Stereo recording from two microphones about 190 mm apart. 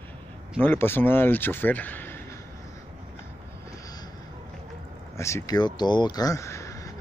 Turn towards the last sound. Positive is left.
turn(degrees=15)  # may be behind; listen again after turning